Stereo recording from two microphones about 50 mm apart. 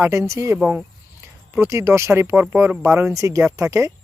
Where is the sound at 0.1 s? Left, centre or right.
Right.